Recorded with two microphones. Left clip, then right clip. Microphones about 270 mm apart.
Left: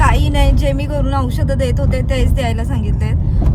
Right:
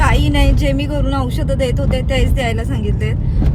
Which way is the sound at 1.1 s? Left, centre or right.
Right.